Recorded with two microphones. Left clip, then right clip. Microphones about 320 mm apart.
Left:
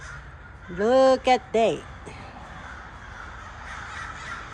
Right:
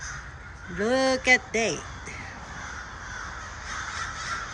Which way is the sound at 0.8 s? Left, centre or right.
Centre.